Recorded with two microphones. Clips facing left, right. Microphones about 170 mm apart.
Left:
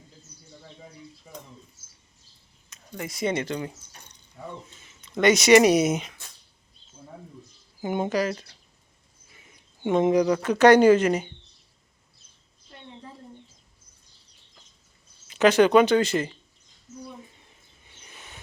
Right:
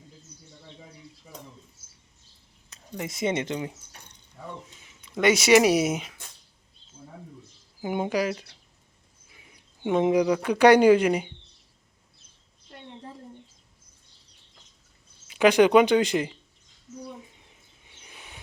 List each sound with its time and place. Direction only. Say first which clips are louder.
2.6 s a sound: right 2 dB; 35° right (ahead or behind)
3.0 s speech: even; 20° right (ahead or behind)
4.8 s speech: left 2 dB; 10° right (ahead or behind)
7.8 s speech: left 1 dB; 5° right (ahead or behind)
15.3 s speech: even; 10° right (ahead or behind)
17.9 s a sound: even; 10° right (ahead or behind)